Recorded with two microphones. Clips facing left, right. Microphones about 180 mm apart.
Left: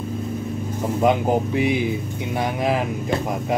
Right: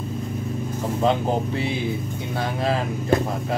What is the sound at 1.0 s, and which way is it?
Speech, 15° left (ahead or behind).